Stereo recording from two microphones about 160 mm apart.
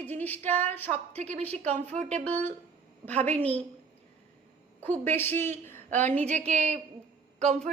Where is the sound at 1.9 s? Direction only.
50° right (ahead or behind).